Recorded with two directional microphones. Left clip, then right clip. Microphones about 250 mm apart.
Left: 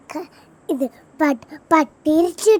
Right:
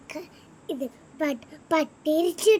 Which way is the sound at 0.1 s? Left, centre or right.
Centre.